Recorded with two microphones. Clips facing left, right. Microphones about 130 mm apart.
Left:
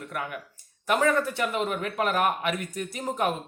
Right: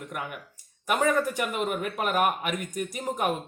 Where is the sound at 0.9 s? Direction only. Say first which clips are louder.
Left 1 dB; 15° right (ahead or behind).